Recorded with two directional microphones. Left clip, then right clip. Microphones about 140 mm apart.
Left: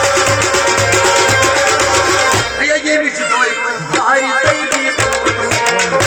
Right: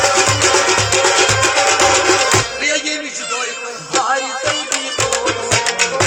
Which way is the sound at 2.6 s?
30° right (ahead or behind).